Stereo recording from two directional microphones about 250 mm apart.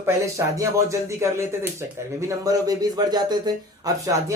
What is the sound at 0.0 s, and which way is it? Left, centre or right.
Speech, centre.